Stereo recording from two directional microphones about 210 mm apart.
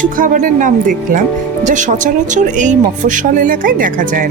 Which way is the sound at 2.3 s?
35° right (ahead or behind).